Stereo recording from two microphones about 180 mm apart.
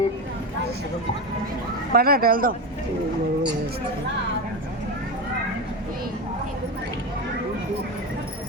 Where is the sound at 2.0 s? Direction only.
55° right (ahead or behind).